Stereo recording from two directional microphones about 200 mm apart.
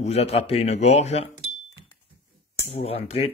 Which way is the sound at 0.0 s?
30° left (ahead or behind).